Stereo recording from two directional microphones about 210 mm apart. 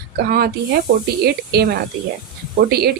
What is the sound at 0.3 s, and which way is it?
Speech, 45° right (ahead or behind).